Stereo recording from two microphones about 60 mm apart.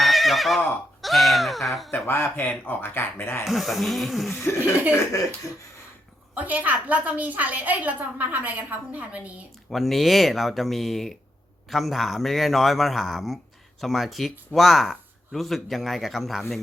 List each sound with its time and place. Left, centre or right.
0.0 s neigh: centre
1.9 s speech: left
3.4 s speech: centre
4.4 s speech: left
6.3 s a woman's voice: right
9.6 s speech: centre